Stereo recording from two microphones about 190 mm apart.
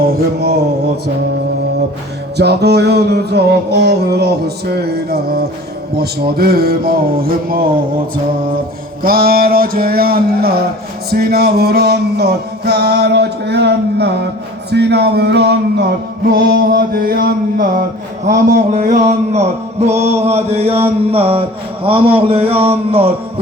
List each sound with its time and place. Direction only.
0.0 s a sound: 60° right (ahead or behind)
2.4 s music: 60° right (ahead or behind)
9.0 s music: 50° right (ahead or behind)
18.5 s mantra: 45° right (ahead or behind)
21.8 s a man's voice: 30° right (ahead or behind)